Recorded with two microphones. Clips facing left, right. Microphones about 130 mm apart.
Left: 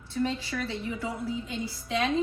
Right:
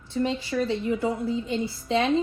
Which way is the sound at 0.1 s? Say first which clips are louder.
Right 4 dB; 25° right (ahead or behind).